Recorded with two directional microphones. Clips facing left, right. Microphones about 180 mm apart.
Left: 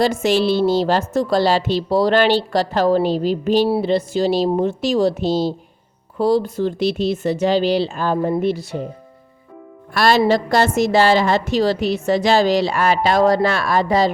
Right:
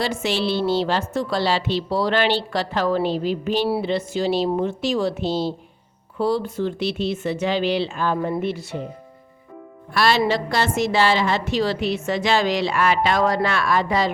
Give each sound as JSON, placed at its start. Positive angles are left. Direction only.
{"t": 0.0, "sound": "a woman's voice", "side_deg": 45}
{"t": 9.9, "sound": "a woman's voice", "side_deg": 45}